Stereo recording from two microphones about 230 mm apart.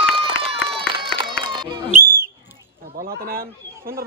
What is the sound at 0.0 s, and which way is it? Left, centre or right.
Run, right.